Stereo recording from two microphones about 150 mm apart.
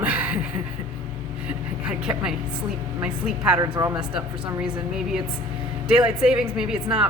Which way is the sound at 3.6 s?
25° right (ahead or behind).